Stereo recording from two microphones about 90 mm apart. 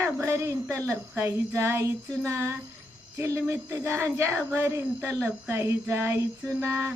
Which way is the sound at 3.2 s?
30° right (ahead or behind).